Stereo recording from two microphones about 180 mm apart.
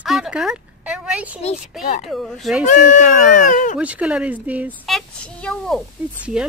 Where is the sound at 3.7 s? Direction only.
5° right (ahead or behind).